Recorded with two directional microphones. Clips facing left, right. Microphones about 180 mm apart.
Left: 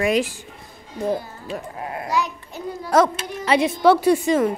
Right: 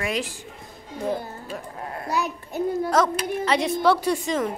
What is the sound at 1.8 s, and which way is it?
Sheep, 10° left (ahead or behind).